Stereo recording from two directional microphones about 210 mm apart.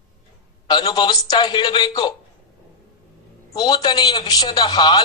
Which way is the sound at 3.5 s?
20° left (ahead or behind).